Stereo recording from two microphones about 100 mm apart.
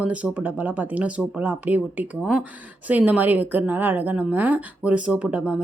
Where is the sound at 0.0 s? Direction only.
15° right (ahead or behind).